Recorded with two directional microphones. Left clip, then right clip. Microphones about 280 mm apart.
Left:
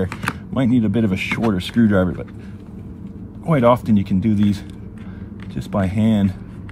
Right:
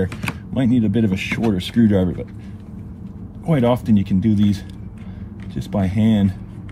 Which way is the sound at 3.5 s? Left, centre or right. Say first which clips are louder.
Left 3 dB; left.